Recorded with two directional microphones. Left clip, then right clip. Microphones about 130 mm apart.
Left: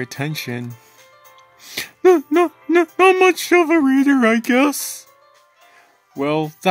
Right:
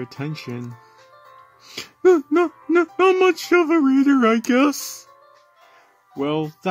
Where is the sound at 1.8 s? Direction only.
20° left (ahead or behind).